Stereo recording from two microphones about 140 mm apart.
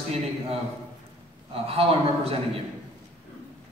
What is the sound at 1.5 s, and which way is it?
A man's voice, 45° right (ahead or behind).